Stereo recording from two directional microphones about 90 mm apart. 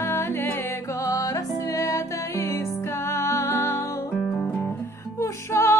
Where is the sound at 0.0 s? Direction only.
30° left (ahead or behind).